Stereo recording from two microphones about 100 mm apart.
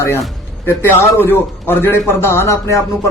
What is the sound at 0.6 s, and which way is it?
A man's voice, 25° left (ahead or behind).